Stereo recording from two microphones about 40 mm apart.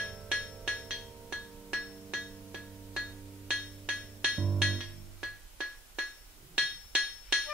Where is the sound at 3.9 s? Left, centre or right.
Left.